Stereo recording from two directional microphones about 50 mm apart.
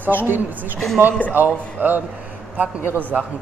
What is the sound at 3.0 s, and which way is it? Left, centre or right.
Speech, right.